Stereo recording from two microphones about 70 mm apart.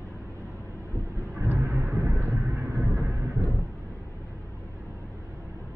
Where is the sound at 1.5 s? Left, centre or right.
Right.